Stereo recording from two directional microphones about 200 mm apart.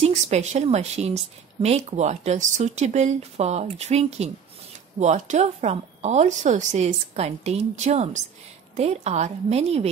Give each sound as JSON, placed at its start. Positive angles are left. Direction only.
{"t": 0.0, "sound": "speech", "side_deg": -35}